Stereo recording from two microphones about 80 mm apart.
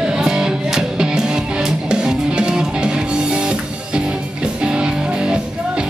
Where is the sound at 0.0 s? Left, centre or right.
Centre.